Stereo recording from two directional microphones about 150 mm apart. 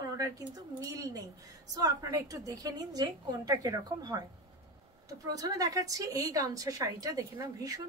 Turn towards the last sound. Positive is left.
turn(degrees=-25)  # may be behind; listen again after turning